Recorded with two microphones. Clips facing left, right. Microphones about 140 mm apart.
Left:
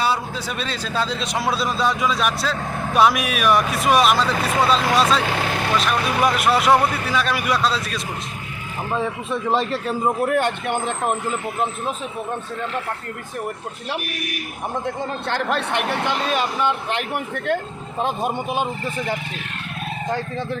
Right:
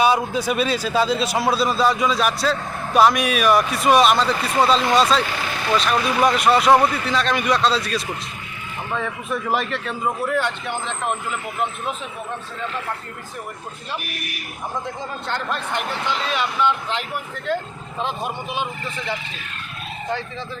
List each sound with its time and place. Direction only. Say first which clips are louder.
0.0 s speech: right 5 dB; 15° right (ahead or behind); by 5.2 s centre (ahead or behind)
5.3 s speech: left 4 dB; 65° left (ahead or behind)
5.7 s speech: right 3 dB; 5° left (ahead or behind)
8.9 s a man's voice: left 2 dB; 30° left (ahead or behind)
10.2 s speech: left 3 dB; 55° left (ahead or behind)
14.8 s speech: left 3 dB; 75° left (ahead or behind); by 16.7 s 45° left (ahead or behind)
16.9 s speech: left 3 dB; 60° left (ahead or behind)